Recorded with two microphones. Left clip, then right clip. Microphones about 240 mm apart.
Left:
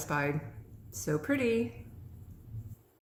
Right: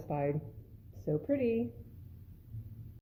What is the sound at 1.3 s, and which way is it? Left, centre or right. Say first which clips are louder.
Speech: left 2 dB; centre.